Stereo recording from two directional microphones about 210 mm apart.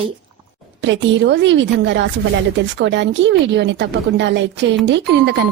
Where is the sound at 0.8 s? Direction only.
60° right (ahead or behind).